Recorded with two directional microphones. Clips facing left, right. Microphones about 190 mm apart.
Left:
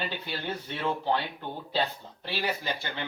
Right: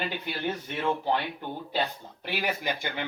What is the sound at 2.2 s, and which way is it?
Speech, 15° right (ahead or behind).